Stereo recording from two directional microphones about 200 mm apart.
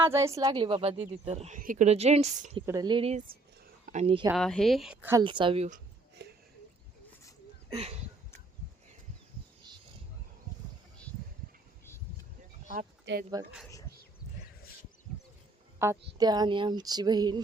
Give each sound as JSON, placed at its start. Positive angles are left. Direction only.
{"t": 0.0, "sound": "a woman's voice", "side_deg": -15}
{"t": 0.4, "sound": "speech", "side_deg": -25}
{"t": 2.6, "sound": "speech", "side_deg": -20}
{"t": 4.4, "sound": "a woman's voice", "side_deg": 5}
{"t": 5.1, "sound": "speech", "side_deg": -25}
{"t": 6.2, "sound": "a sound", "side_deg": -55}
{"t": 7.7, "sound": "speech", "side_deg": -30}
{"t": 13.1, "sound": "speech", "side_deg": -60}
{"t": 15.8, "sound": "speech", "side_deg": -15}